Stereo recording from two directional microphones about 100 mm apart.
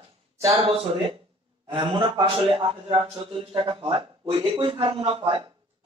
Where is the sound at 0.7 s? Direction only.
65° right (ahead or behind).